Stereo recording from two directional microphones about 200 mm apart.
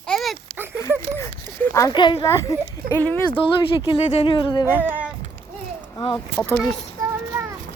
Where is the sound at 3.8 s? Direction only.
25° left (ahead or behind).